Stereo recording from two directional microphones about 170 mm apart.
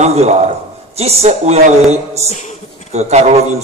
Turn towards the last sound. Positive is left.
turn(degrees=-40)  # may be behind; listen again after turning